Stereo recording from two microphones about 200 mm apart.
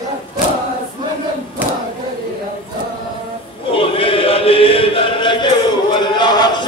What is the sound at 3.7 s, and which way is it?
Chant, 25° left (ahead or behind).